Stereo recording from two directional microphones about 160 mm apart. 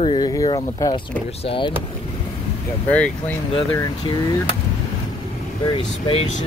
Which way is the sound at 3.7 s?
20° left (ahead or behind).